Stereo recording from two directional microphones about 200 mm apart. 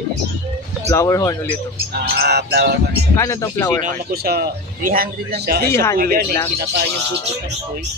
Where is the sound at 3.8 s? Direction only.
50° right (ahead or behind).